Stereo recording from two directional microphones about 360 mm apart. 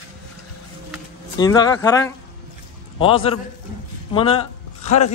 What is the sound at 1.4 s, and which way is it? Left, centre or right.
A man's voice, centre.